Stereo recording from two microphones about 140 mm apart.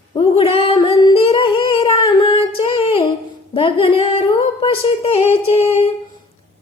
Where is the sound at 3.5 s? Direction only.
40° left (ahead or behind).